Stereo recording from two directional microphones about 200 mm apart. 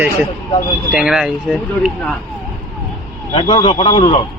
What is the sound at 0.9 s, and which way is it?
Speech, 5° right (ahead or behind).